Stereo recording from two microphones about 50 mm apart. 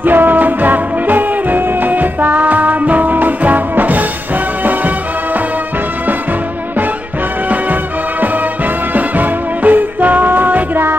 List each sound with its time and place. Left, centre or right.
0.0 s music: right
8.9 s music: right